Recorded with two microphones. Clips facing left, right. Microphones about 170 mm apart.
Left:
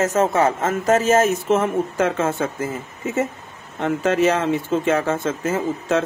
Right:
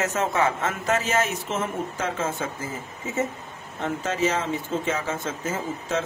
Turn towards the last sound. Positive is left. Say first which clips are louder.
# left 7 dB
turn(degrees=65)  # may be behind; listen again after turning